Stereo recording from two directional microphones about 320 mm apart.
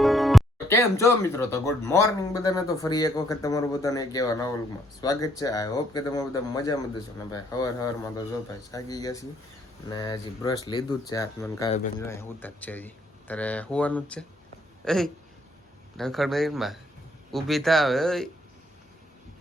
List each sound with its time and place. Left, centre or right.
0.0 s speech: centre